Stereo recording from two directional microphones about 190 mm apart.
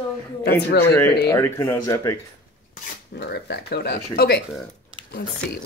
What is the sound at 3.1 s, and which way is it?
Speech, 60° left (ahead or behind).